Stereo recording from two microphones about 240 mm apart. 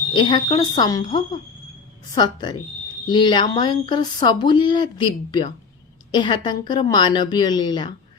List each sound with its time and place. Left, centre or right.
0.1 s a woman's voice: centre